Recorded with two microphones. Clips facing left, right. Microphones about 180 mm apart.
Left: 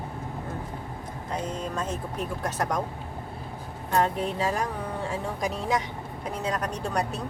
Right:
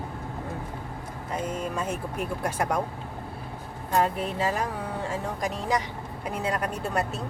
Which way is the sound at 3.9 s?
5° right (ahead or behind).